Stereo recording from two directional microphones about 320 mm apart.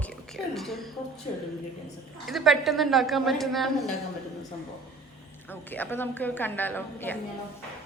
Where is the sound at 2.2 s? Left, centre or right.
Centre.